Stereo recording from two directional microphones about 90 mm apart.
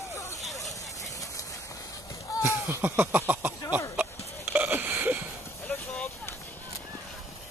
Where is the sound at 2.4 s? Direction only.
25° right (ahead or behind).